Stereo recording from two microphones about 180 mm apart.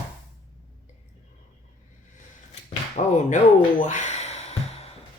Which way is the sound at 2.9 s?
40° left (ahead or behind).